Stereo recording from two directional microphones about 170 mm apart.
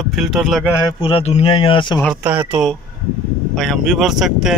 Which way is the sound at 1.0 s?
35° left (ahead or behind).